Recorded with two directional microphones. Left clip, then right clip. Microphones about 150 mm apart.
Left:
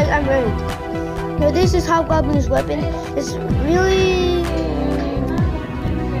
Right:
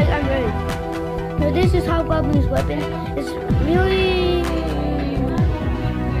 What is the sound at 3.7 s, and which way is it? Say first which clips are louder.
Speech: left 3 dB; 15° left (ahead or behind).